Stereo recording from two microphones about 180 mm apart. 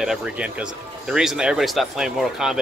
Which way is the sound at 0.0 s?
Centre (ahead or behind).